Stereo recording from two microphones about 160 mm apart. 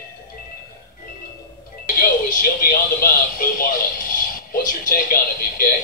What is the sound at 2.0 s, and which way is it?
Music, 60° left (ahead or behind).